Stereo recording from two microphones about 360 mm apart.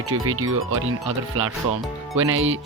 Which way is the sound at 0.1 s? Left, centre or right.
Right.